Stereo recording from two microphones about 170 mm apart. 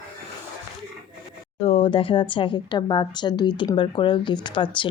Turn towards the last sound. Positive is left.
turn(degrees=30)  # may be behind; listen again after turning